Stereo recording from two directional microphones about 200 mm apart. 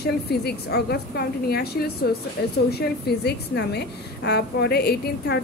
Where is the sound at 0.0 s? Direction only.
55° left (ahead or behind).